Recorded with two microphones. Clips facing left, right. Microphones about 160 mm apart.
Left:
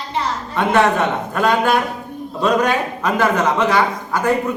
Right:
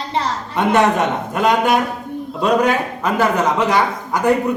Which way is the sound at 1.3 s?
15° right (ahead or behind).